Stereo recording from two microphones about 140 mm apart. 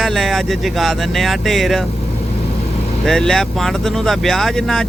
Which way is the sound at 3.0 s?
5° left (ahead or behind).